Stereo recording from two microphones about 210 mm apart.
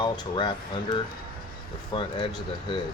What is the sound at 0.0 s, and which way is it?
Speech, 20° left (ahead or behind).